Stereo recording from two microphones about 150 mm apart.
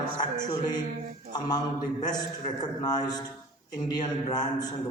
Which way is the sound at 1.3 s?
25° left (ahead or behind).